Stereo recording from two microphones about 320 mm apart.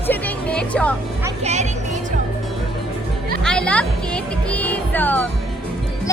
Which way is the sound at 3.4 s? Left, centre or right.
Centre.